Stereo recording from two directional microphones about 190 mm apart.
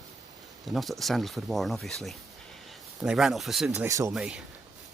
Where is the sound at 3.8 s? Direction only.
15° right (ahead or behind).